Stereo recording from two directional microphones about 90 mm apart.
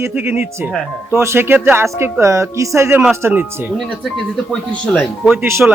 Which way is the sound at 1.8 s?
30° right (ahead or behind).